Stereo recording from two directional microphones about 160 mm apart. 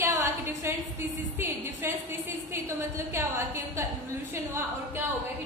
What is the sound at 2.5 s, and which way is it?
A woman's voice, 15° right (ahead or behind).